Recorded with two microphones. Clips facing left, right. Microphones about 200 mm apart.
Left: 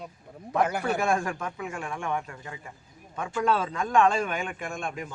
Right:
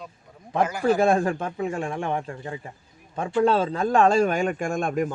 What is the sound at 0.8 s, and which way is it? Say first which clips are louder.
A man's voice: right 7 dB; 30° right (ahead or behind).